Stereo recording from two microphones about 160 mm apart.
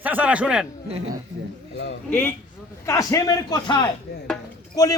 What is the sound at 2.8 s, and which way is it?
A man's voice, 20° left (ahead or behind).